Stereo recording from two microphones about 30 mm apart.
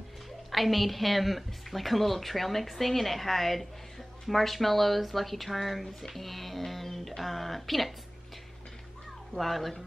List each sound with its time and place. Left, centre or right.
0.5 s a woman's voice: centre
9.4 s a woman's voice: centre